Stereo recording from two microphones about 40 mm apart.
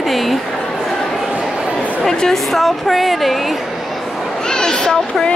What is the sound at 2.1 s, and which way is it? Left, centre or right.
A woman's voice, centre.